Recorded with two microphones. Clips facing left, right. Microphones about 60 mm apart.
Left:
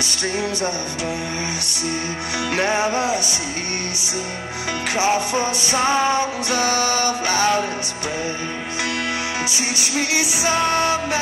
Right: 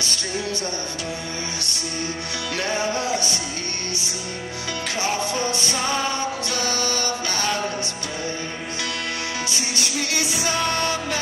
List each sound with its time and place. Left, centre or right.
2.5 s music: left
4.9 s music: centre
10.1 s music: centre